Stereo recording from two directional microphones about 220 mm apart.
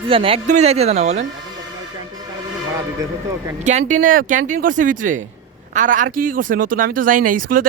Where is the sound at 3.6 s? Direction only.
35° right (ahead or behind).